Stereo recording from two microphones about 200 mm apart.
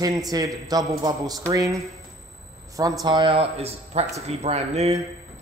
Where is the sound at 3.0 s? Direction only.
20° right (ahead or behind).